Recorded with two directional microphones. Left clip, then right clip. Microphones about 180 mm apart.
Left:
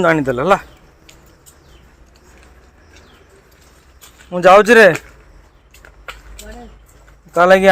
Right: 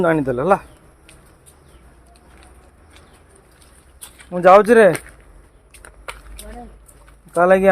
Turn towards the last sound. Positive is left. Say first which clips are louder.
# left 4 dB
turn(degrees=5)  # may be behind; listen again after turning